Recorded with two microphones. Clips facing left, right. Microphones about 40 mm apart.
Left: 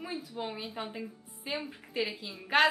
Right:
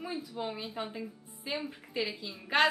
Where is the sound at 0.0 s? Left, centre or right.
Centre.